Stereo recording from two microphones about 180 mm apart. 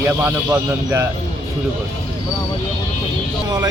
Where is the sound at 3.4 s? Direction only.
20° right (ahead or behind).